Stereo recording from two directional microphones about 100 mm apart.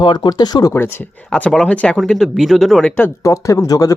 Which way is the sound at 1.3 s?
5° left (ahead or behind).